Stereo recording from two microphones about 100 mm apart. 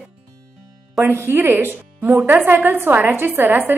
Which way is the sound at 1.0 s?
20° right (ahead or behind).